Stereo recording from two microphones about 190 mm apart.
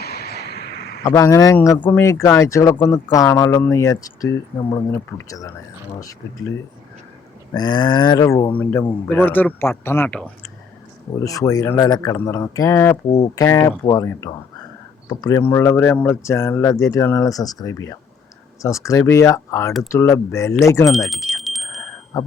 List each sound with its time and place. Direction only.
0.0 s a sound: 55° left (ahead or behind)
1.0 s speech: 15° left (ahead or behind)
7.5 s speech: 20° left (ahead or behind); by 10.5 s 5° left (ahead or behind)
11.2 s speech: 15° left (ahead or behind)
20.9 s a sound: centre (ahead or behind)
22.1 s speech: 20° left (ahead or behind)